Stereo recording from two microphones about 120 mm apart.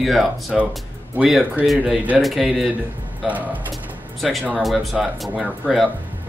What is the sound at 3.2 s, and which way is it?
Speech, 15° right (ahead or behind).